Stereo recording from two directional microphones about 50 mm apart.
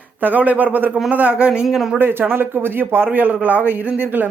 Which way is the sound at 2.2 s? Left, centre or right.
Right.